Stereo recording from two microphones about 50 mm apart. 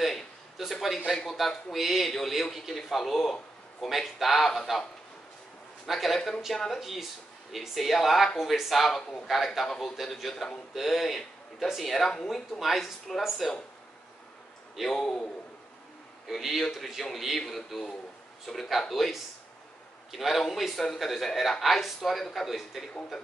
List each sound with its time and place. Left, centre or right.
0.0 s a sound: centre
1.1 s a man's voice: centre
5.9 s a man's voice: centre
6.8 s a man's voice: centre
9.7 s speech: centre
9.9 s a man's voice: centre
15.0 s speech: centre
16.3 s a man's voice: centre